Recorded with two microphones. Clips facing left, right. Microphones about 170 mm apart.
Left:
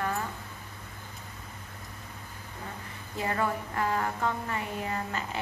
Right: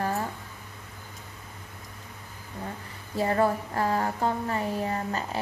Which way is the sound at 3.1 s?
35° right (ahead or behind).